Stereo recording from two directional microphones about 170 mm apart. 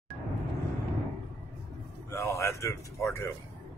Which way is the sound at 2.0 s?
15° left (ahead or behind).